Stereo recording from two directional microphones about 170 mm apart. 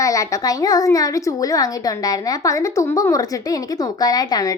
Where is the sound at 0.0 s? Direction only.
20° left (ahead or behind).